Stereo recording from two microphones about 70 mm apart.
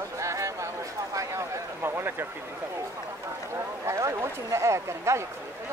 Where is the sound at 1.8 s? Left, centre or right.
Right.